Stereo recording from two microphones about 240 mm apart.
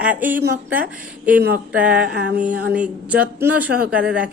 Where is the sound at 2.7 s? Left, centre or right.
Centre.